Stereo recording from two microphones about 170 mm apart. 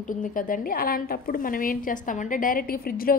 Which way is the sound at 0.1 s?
50° left (ahead or behind).